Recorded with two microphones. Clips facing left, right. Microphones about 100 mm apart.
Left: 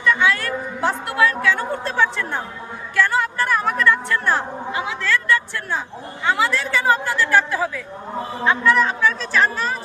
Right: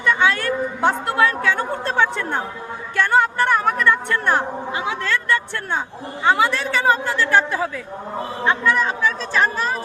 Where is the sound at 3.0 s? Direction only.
25° right (ahead or behind).